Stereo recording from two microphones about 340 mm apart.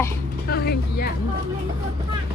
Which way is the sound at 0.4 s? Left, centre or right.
Left.